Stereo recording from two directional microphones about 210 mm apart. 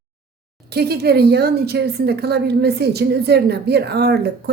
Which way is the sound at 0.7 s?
50° right (ahead or behind).